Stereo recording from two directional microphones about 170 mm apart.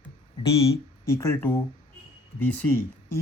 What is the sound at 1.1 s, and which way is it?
Speech, 15° left (ahead or behind).